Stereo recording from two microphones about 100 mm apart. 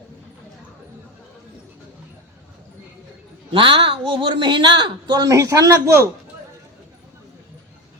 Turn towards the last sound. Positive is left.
turn(degrees=-30)  # may be behind; listen again after turning